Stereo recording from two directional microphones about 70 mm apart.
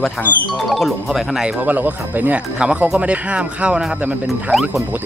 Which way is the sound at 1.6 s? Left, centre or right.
Right.